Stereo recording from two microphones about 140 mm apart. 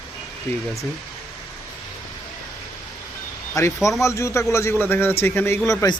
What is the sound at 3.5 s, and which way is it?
A man's voice, 20° left (ahead or behind).